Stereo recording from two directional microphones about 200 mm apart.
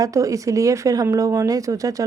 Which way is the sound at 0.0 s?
15° right (ahead or behind).